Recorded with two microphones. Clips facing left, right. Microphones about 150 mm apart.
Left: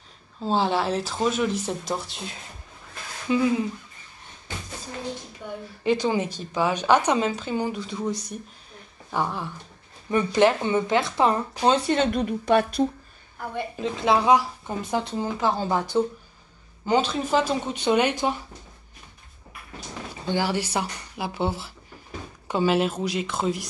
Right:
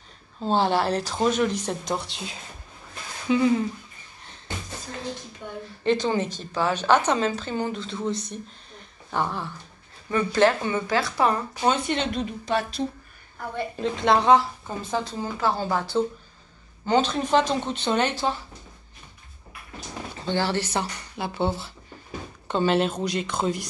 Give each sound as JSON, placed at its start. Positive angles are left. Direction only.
{"t": 0.4, "sound": "speech", "side_deg": 0}
{"t": 5.9, "sound": "a woman's voice", "side_deg": 10}
{"t": 11.7, "sound": "speech", "side_deg": 45}
{"t": 13.7, "sound": "a woman's voice", "side_deg": 5}
{"t": 20.2, "sound": "a woman's voice", "side_deg": 10}